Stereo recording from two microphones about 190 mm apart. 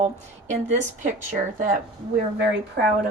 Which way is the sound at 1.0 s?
45° right (ahead or behind).